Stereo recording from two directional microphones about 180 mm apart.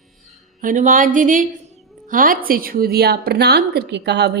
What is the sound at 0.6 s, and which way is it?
A woman's voice, 50° right (ahead or behind).